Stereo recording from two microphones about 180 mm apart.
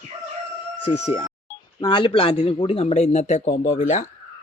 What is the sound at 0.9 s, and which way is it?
Speech, 35° left (ahead or behind).